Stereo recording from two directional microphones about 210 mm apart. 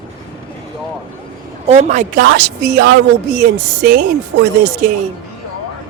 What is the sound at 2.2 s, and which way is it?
Speech, 55° right (ahead or behind).